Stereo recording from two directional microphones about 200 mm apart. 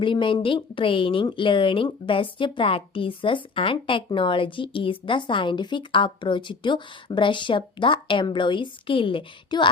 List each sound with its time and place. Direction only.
0.0 s a woman's voice: 25° left (ahead or behind)